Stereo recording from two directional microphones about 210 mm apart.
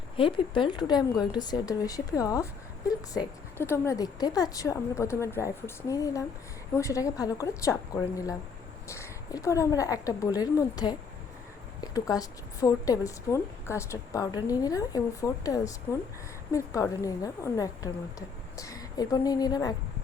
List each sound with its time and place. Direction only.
0.2 s a woman's voice: 25° left (ahead or behind)